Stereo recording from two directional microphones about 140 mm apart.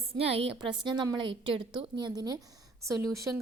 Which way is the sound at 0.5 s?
35° right (ahead or behind).